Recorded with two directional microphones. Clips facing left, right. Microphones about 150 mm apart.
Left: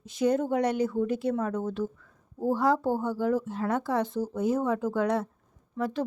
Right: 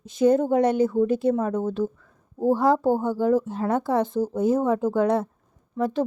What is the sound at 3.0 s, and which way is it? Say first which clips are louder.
A woman's voice: right 6 dB; 30° right (ahead or behind).